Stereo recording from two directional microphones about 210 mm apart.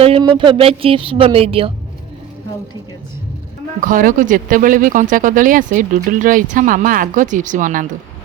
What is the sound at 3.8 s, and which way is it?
Speech, 40° right (ahead or behind).